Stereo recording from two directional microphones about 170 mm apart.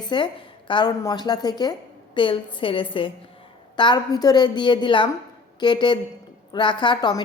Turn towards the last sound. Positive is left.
turn(degrees=25)  # may be behind; listen again after turning